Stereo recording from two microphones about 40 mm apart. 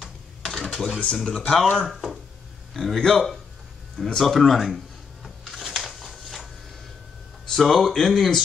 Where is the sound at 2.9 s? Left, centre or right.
Centre.